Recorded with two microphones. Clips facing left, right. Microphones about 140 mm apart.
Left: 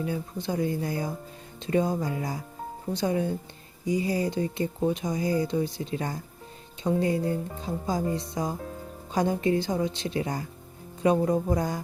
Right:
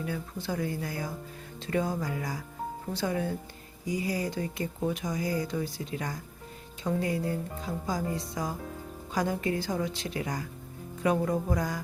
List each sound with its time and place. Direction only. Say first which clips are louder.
0.0 s speech: left 4 dB; 20° left (ahead or behind)